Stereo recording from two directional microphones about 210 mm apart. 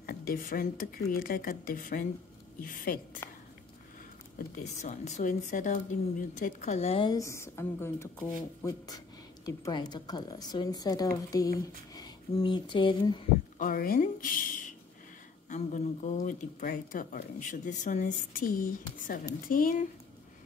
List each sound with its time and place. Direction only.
0.0 s speech: 45° left (ahead or behind)
3.2 s a sound: 10° left (ahead or behind)
4.8 s a woman's voice: 35° left (ahead or behind)
13.6 s speech: 45° left (ahead or behind)
15.5 s speech: 35° left (ahead or behind)